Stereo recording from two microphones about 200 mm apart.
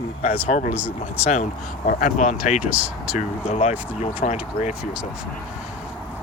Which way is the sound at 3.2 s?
30° left (ahead or behind).